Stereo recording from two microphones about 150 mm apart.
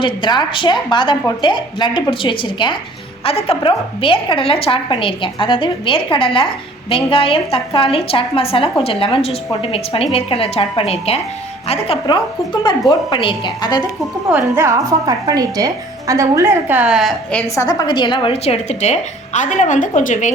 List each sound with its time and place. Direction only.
0.0 s a woman's voice: 30° left (ahead or behind)
14.3 s a woman's voice: 15° right (ahead or behind); by 17.4 s centre (ahead or behind)
17.5 s a woman's voice: 25° left (ahead or behind); by 20.3 s 60° left (ahead or behind)